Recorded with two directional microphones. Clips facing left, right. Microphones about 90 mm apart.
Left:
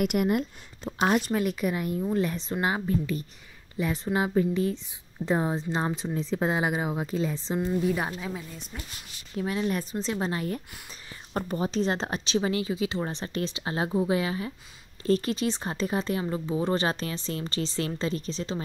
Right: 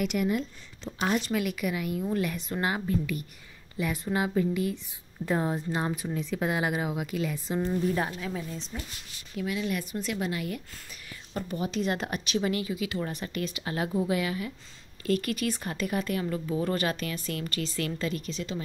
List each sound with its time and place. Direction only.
0.0 s speech: 50° left (ahead or behind)
1.3 s speech: 35° left (ahead or behind)
8.7 s speech: centre (ahead or behind)
9.4 s speech: 35° left (ahead or behind)